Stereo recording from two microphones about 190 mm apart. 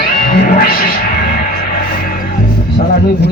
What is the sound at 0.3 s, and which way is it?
Music, 45° left (ahead or behind).